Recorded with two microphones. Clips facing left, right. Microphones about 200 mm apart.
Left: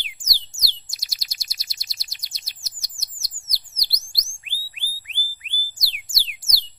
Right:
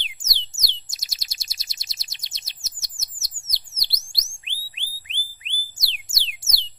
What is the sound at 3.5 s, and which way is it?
Bird, 25° right (ahead or behind).